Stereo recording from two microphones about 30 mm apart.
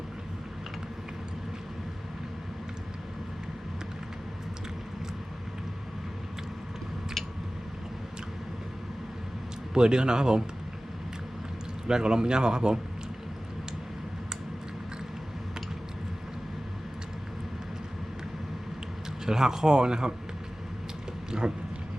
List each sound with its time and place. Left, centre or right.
9.7 s a man's voice: right
11.9 s a man's voice: right
19.2 s a man's voice: right
21.3 s a sound: right